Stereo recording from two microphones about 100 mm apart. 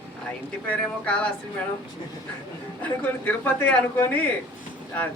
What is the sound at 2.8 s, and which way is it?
A man's voice, 15° left (ahead or behind).